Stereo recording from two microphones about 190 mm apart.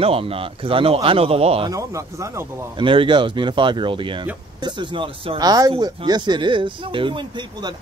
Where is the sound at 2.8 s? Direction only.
25° right (ahead or behind).